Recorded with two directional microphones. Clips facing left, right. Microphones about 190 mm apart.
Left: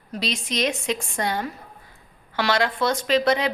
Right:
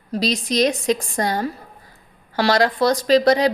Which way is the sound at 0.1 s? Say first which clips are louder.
Right 7 dB; 40° right (ahead or behind).